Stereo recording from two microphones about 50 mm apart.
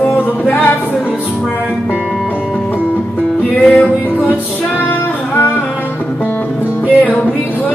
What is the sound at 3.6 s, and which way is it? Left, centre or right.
Music, left.